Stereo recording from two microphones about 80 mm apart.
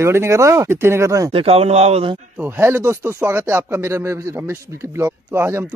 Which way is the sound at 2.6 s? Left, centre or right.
Right.